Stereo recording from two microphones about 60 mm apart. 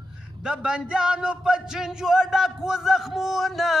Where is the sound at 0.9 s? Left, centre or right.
Centre.